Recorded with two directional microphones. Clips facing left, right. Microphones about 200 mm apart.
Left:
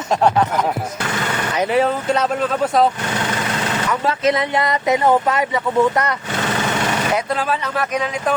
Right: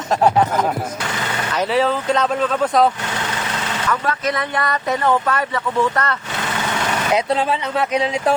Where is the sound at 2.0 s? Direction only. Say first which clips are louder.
Even; 5° left (ahead or behind).